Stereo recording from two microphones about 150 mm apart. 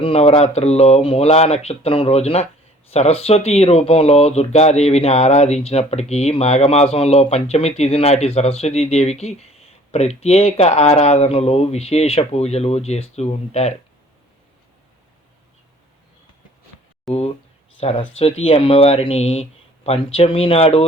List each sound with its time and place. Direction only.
0.0 s speech: 40° left (ahead or behind)
17.1 s speech: centre (ahead or behind)
17.7 s speech: 40° left (ahead or behind)